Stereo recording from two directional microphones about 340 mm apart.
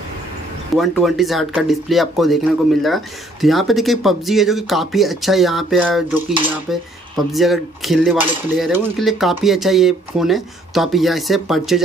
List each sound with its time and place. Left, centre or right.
0.7 s speech: centre